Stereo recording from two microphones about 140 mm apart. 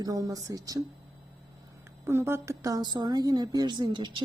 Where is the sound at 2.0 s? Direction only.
15° right (ahead or behind).